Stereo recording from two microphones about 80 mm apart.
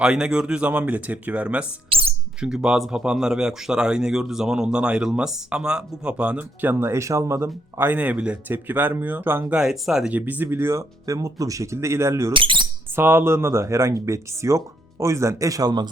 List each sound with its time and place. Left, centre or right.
0.0 s speech: centre
6.6 s speech: right
9.6 s speech: centre
10.1 s speech: right
12.3 s speech: right
13.0 s speech: right